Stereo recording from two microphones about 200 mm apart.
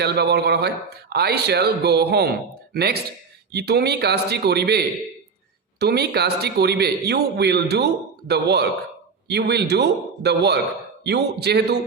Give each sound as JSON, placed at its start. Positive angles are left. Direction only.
{"t": 0.0, "sound": "a man's voice", "side_deg": -55}